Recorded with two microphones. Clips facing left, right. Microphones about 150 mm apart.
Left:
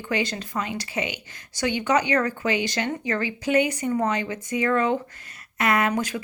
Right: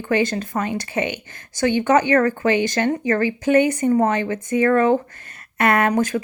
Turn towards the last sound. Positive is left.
turn(degrees=-50)  # may be behind; listen again after turning